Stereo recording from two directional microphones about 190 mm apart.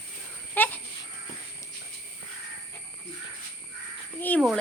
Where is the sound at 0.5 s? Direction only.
10° left (ahead or behind).